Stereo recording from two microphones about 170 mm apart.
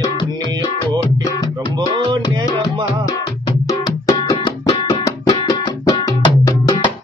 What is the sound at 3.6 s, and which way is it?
Music, 20° left (ahead or behind).